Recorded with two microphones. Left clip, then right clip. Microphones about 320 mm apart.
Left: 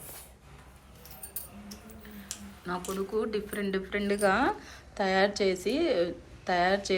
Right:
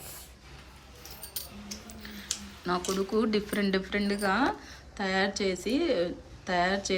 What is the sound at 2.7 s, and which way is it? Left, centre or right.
Speech, centre.